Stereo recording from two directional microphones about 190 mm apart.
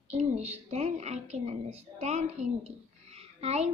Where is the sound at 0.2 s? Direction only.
35° right (ahead or behind).